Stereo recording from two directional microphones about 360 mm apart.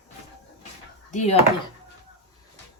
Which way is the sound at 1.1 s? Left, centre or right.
Centre.